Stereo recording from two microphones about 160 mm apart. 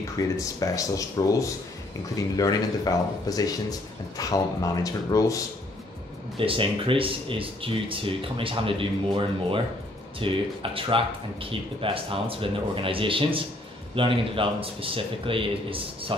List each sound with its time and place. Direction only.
0.2 s speech: 20° left (ahead or behind)
6.3 s speech: 35° right (ahead or behind)